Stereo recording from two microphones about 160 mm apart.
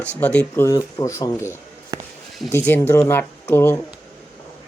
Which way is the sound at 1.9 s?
25° right (ahead or behind).